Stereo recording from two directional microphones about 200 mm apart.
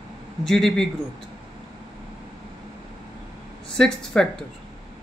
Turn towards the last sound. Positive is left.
turn(degrees=5)  # may be behind; listen again after turning